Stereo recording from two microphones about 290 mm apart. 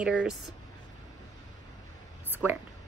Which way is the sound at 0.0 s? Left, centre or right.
Centre.